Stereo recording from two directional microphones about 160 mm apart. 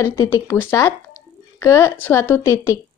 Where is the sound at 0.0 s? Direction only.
15° left (ahead or behind).